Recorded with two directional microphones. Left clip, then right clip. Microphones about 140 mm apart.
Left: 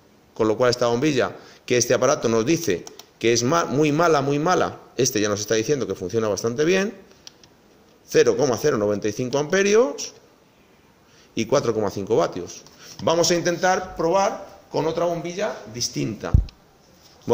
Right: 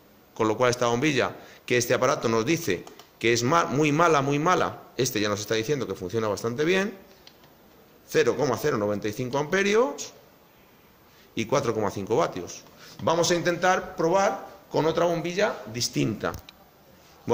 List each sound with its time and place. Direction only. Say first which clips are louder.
0.3 s a man's voice: left 4 dB; 25° left (ahead or behind)
8.1 s a man's voice: left 5 dB; 35° left (ahead or behind)
11.3 s a man's voice: left 4 dB; 30° left (ahead or behind)
13.0 s a man's voice: left 3 dB; 40° left (ahead or behind)
13.9 s a man's voice: left 2 dB; 15° left (ahead or behind)
14.7 s a man's voice: left 1 dB; centre (ahead or behind)
15.0 s speech: even; 20° right (ahead or behind)